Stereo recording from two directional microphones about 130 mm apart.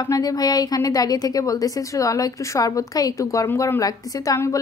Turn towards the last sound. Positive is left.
turn(degrees=25)  # may be behind; listen again after turning